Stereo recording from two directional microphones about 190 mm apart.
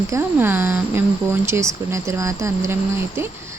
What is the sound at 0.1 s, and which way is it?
Speech, 10° right (ahead or behind).